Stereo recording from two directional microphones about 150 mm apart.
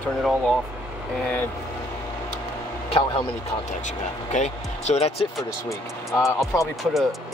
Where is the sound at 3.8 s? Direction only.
50° left (ahead or behind).